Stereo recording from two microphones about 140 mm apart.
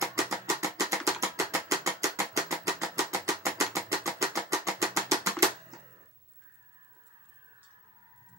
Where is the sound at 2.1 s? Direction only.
20° right (ahead or behind).